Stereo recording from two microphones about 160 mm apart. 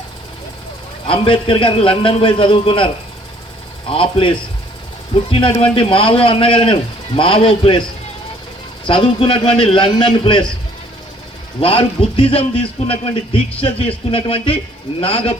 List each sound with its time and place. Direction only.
1.0 s speech: 35° left (ahead or behind)
8.9 s speech: 30° left (ahead or behind)
11.6 s speech: 35° left (ahead or behind)